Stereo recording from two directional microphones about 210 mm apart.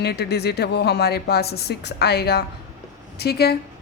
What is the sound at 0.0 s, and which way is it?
Speech, 50° left (ahead or behind).